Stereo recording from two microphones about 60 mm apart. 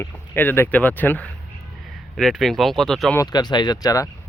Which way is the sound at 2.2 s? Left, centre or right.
Centre.